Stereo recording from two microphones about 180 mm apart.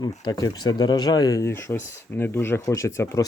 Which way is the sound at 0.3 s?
20° left (ahead or behind).